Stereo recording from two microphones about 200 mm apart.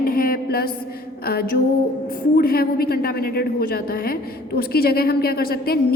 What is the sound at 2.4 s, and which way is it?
A woman's voice, 50° left (ahead or behind).